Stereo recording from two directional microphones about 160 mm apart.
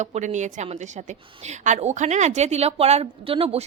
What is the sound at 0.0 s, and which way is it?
A woman's voice, 45° right (ahead or behind).